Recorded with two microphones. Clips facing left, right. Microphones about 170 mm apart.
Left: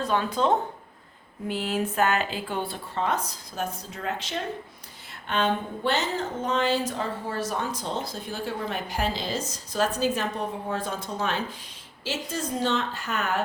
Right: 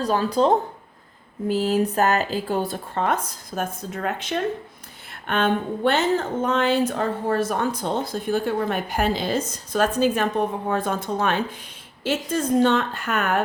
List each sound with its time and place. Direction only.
0.0 s speech: 35° right (ahead or behind); by 13.4 s 55° right (ahead or behind)